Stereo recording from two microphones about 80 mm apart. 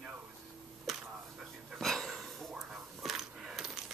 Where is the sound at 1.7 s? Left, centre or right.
Centre.